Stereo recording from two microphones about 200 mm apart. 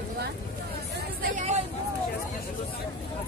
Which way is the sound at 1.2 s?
35° right (ahead or behind).